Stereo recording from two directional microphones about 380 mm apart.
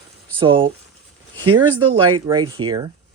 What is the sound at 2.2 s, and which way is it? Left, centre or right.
Speech, centre.